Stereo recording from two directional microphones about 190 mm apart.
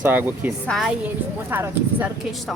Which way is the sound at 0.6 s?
Centre (ahead or behind).